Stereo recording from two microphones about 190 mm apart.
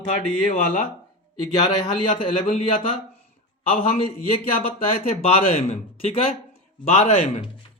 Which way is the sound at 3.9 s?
30° left (ahead or behind).